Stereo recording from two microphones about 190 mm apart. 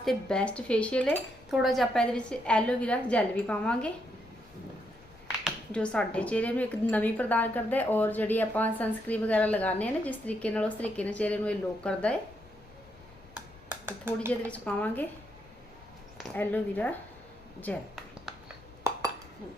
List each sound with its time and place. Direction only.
0.0 s speech: centre (ahead or behind)
5.4 s a woman's voice: 5° left (ahead or behind)
13.3 s a sound: 10° right (ahead or behind)
14.5 s a woman's voice: 10° left (ahead or behind)
16.3 s a woman's voice: 10° left (ahead or behind)
18.3 s a sound: centre (ahead or behind)
18.8 s dishes: 15° right (ahead or behind)